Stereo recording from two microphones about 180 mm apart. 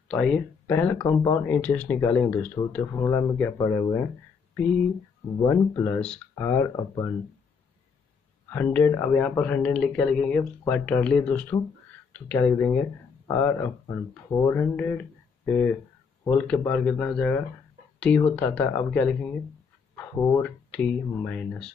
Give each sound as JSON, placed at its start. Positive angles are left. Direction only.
{"t": 0.1, "sound": "speech", "side_deg": 5}
{"t": 5.4, "sound": "speech", "side_deg": 15}
{"t": 8.5, "sound": "speech", "side_deg": 10}
{"t": 20.4, "sound": "speech", "side_deg": 5}